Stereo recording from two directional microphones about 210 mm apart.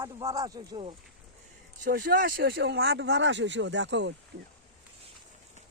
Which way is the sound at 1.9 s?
45° right (ahead or behind).